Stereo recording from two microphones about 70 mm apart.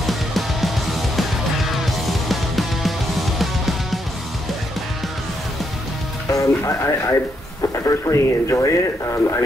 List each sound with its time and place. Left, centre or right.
0.0 s music: centre
6.3 s speech: left